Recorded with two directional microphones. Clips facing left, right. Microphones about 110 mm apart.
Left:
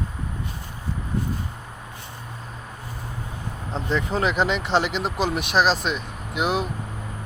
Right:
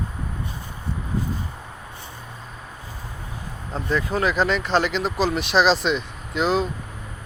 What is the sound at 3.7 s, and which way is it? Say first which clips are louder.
Speech: right 1 dB; 25° left (ahead or behind).